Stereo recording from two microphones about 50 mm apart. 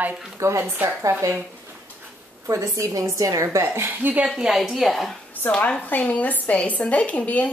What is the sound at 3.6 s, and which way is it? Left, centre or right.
Speech, right.